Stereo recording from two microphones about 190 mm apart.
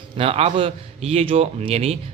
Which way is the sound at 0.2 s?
30° right (ahead or behind).